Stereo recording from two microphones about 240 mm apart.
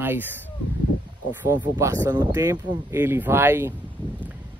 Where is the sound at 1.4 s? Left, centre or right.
Centre.